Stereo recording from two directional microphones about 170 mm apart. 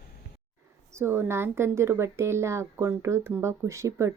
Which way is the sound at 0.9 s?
15° right (ahead or behind).